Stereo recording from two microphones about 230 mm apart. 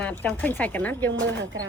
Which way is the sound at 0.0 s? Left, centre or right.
Centre.